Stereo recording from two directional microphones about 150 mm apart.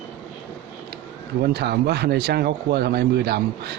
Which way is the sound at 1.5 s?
90° right.